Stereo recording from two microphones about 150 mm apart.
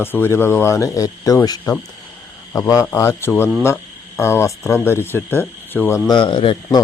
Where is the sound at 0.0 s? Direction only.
15° left (ahead or behind).